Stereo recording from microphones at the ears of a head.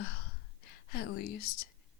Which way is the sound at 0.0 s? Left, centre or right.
Left.